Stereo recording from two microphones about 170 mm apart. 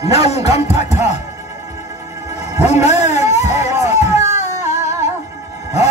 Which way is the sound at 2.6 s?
40° left (ahead or behind).